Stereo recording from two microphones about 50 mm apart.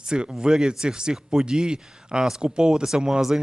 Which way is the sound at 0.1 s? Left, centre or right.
Centre.